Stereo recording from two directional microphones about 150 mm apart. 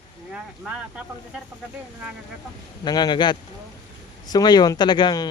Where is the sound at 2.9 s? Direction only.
30° left (ahead or behind).